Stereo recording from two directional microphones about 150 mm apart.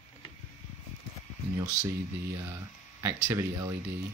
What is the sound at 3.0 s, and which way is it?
Speech, 20° right (ahead or behind).